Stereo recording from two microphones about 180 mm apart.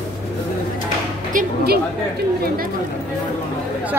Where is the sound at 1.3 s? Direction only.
50° right (ahead or behind).